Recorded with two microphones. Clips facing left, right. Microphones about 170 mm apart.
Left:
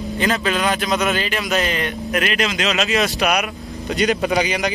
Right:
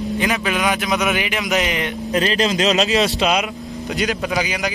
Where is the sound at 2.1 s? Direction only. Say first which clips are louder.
Right 4 dB; 30° right (ahead or behind).